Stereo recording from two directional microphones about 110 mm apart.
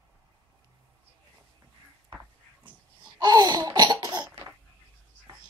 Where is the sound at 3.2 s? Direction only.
40° right (ahead or behind).